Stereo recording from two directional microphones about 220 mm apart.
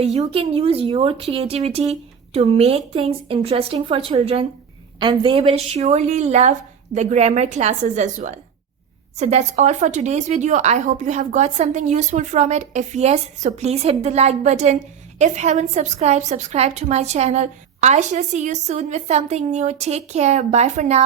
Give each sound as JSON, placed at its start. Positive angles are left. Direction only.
{"t": 0.0, "sound": "a woman's voice", "side_deg": -30}